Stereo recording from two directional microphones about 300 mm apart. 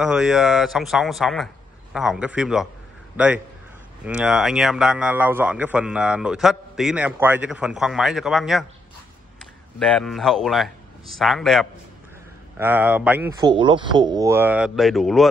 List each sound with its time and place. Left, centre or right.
0.0 s a man's voice: centre
4.0 s a man's voice: centre